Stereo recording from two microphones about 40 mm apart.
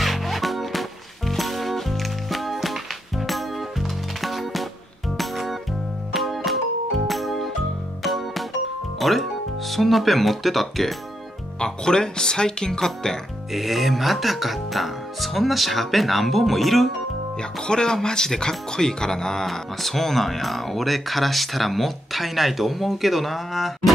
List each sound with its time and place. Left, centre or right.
0.0 s music: centre
9.0 s speech: centre
11.6 s speech: centre
13.5 s speech: centre
17.4 s speech: centre
19.4 s speech: centre